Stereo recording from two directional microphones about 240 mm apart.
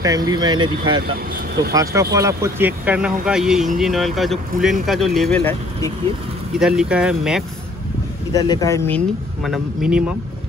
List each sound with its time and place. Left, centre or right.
0.0 s speech: centre
8.3 s speech: centre